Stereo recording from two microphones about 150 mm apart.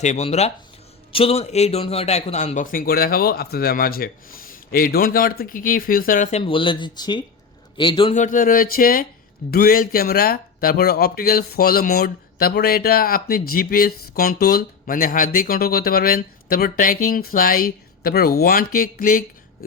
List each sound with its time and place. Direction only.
0.0 s speech: 50° left (ahead or behind); by 6.2 s 70° left (ahead or behind)
6.4 s speech: 35° left (ahead or behind)
8.1 s speech: 60° left (ahead or behind)
9.5 s speech: 85° left; by 19.2 s 70° left (ahead or behind)